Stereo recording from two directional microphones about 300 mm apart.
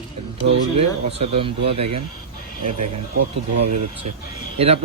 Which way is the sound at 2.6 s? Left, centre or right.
Right.